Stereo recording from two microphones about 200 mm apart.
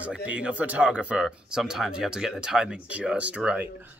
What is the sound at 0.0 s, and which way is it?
Speech, 5° right (ahead or behind).